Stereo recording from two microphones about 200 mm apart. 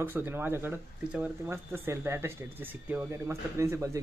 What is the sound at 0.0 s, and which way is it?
Speech, 10° right (ahead or behind).